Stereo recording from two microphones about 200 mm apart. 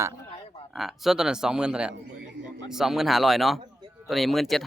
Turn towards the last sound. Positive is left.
turn(degrees=0)  # may be behind; listen again after turning